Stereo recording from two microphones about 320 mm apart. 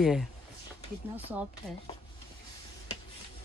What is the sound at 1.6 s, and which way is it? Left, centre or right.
Speech, centre.